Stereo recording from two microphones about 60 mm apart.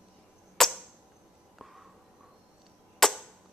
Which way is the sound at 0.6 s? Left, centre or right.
Centre.